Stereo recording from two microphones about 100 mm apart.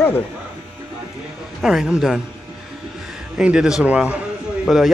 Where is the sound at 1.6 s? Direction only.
5° right (ahead or behind).